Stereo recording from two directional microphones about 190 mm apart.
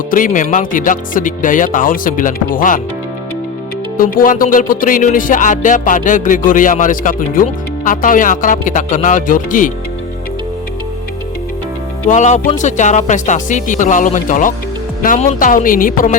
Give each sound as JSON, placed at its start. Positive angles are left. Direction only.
{"t": 0.1, "sound": "music", "side_deg": 45}
{"t": 3.9, "sound": "music", "side_deg": 50}
{"t": 12.0, "sound": "speech", "side_deg": 40}
{"t": 15.0, "sound": "music", "side_deg": 45}